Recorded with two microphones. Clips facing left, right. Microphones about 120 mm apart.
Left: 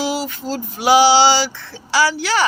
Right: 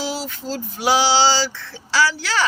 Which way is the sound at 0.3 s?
Centre (ahead or behind).